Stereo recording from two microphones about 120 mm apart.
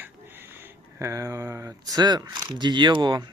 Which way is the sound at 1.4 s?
20° right (ahead or behind).